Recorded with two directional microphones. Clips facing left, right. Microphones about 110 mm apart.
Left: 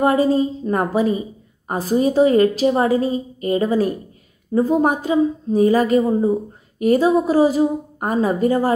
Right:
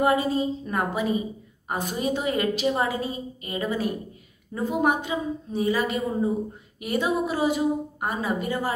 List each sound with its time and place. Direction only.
0.0 s a woman's voice: 40° left (ahead or behind)